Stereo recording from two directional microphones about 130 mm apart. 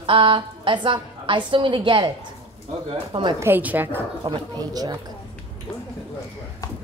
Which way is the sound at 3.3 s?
15° right (ahead or behind).